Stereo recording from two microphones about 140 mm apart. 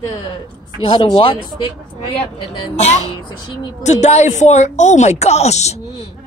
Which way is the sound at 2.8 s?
55° left (ahead or behind).